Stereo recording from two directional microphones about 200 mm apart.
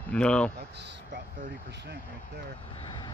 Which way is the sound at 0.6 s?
60° right (ahead or behind).